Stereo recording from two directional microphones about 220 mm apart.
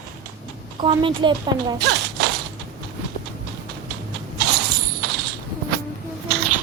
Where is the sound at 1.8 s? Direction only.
45° right (ahead or behind).